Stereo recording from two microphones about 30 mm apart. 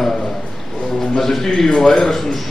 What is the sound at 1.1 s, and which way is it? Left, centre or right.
Speech, centre.